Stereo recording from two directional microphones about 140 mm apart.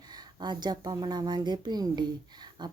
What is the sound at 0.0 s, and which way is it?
A woman's voice, 30° right (ahead or behind).